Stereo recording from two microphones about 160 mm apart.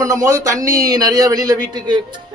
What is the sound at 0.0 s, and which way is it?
A man's voice, 20° right (ahead or behind).